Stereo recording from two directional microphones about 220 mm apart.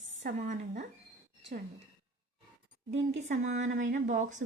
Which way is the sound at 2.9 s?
35° right (ahead or behind).